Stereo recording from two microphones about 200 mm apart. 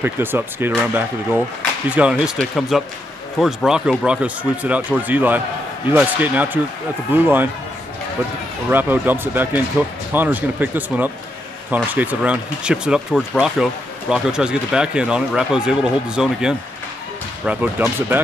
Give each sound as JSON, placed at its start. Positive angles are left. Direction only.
{"t": 0.0, "sound": "speech", "side_deg": -10}
{"t": 8.6, "sound": "speech", "side_deg": -10}